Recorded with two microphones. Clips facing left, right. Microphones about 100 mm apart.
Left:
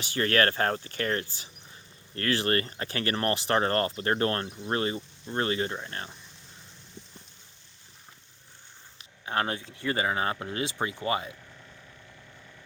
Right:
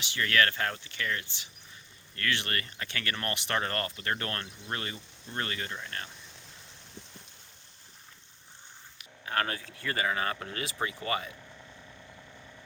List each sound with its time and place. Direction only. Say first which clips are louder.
0.0 s speech: left 3 dB; 40° left (ahead or behind)
9.0 s speech: left 2 dB; 25° left (ahead or behind)